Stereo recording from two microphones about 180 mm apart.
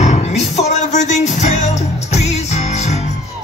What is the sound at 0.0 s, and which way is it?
Music, 40° left (ahead or behind).